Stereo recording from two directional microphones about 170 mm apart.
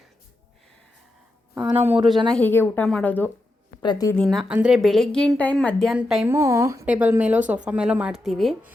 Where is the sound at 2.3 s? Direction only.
10° left (ahead or behind).